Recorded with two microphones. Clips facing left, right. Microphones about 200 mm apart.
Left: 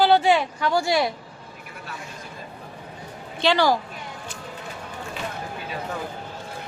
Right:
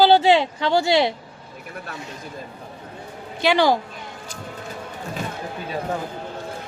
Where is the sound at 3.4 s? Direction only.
15° right (ahead or behind).